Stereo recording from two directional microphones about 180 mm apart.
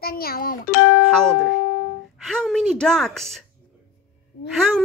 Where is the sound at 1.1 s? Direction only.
5° left (ahead or behind).